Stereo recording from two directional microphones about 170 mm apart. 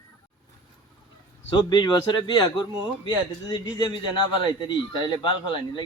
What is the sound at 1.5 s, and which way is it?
Speech, 25° left (ahead or behind).